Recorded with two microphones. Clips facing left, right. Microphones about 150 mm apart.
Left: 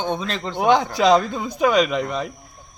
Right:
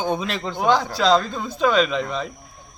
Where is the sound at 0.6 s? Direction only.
20° left (ahead or behind).